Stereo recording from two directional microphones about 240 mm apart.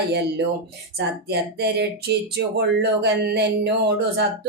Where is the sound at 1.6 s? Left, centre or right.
Right.